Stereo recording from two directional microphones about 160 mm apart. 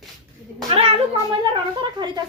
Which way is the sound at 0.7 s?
35° right (ahead or behind).